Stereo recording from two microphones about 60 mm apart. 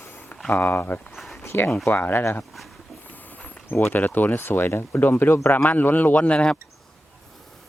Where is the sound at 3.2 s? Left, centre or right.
Left.